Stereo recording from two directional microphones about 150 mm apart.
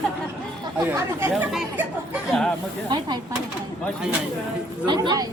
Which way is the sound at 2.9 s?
30° right (ahead or behind).